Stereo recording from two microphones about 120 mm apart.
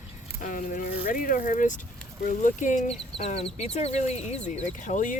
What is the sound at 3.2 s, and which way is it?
Speech, 55° left (ahead or behind).